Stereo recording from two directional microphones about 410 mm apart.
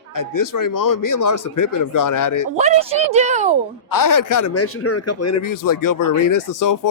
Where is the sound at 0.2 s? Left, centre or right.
Left.